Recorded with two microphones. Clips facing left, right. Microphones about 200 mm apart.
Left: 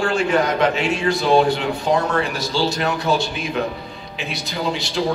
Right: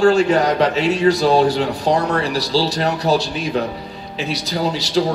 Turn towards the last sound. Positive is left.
turn(degrees=-40)  # may be behind; listen again after turning